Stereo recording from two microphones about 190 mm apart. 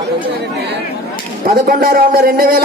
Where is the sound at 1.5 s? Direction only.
50° right (ahead or behind).